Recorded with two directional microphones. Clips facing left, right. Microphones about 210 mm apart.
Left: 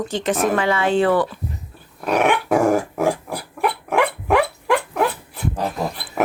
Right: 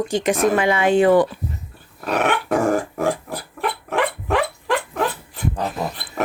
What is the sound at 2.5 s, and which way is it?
Dog, 10° left (ahead or behind).